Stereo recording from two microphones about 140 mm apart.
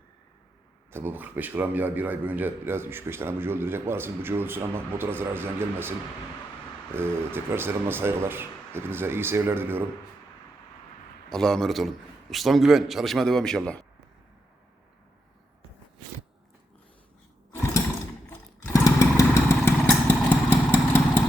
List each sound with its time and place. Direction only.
0.9 s a man's voice: 15° right (ahead or behind)
6.9 s a man's voice: 15° right (ahead or behind)
11.3 s a man's voice: 5° left (ahead or behind)
18.7 s motorcycle: 25° left (ahead or behind)
20.3 s vehicle: 15° left (ahead or behind)